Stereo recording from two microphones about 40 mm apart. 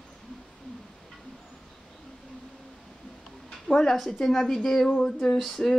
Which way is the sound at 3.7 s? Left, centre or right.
Centre.